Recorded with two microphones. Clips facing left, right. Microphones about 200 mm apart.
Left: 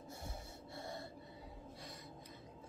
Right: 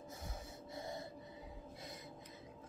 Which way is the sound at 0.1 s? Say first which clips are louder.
Left 2 dB; 20° right (ahead or behind).